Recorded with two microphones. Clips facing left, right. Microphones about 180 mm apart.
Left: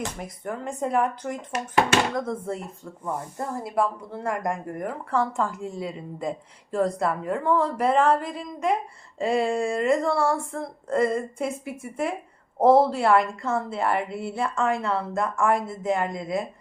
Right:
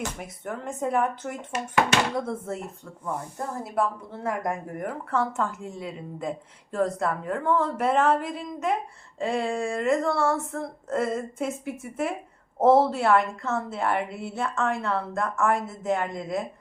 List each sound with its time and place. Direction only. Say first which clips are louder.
0.2 s speech: left 2 dB; 5° right (ahead or behind)